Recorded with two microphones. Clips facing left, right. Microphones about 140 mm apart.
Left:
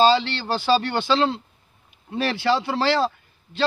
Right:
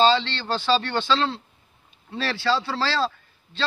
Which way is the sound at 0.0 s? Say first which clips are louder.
Left 2 dB; 10° left (ahead or behind).